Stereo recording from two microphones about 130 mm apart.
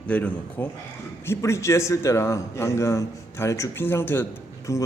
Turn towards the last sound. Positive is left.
turn(degrees=25)  # may be behind; listen again after turning